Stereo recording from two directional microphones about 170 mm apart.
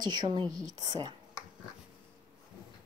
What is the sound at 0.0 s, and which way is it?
A woman's voice, 25° right (ahead or behind).